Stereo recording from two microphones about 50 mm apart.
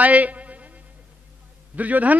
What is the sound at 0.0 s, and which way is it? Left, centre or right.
Music, right.